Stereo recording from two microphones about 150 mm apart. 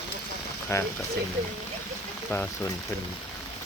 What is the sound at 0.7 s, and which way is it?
Speech, 20° left (ahead or behind).